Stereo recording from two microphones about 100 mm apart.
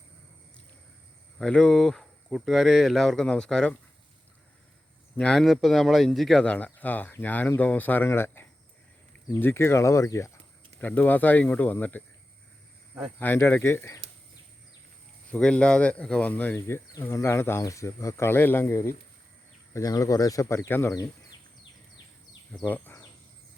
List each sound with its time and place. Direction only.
1.4 s speech: 10° left (ahead or behind)
5.1 s speech: 10° left (ahead or behind)
6.4 s speech: 15° left (ahead or behind); by 10.3 s 30° left (ahead or behind)
10.8 s speech: 15° left (ahead or behind)
13.1 s speech: 20° left (ahead or behind)
15.3 s speech: 10° left (ahead or behind)
19.7 s speech: 35° left (ahead or behind)
22.6 s speech: 20° left (ahead or behind)